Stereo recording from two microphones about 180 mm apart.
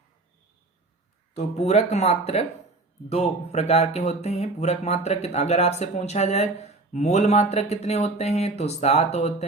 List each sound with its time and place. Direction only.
1.4 s speech: 40° left (ahead or behind)